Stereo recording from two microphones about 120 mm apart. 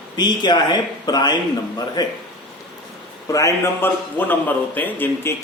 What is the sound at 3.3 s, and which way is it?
Speech, 25° left (ahead or behind).